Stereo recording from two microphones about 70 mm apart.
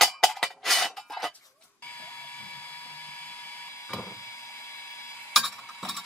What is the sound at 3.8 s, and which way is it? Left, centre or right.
Wood, left.